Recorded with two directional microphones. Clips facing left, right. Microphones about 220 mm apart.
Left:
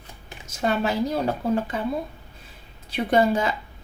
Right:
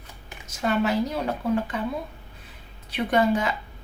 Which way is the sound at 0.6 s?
35° left (ahead or behind).